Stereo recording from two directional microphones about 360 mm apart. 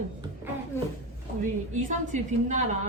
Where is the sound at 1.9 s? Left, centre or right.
Centre.